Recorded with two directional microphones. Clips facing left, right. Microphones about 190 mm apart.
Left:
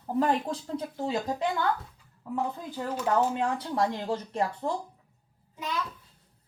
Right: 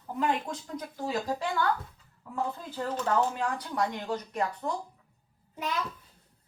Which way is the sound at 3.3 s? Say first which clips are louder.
Left 3 dB; 25° left (ahead or behind).